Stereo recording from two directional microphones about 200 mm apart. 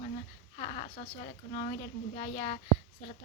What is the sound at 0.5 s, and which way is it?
Speech, 30° left (ahead or behind).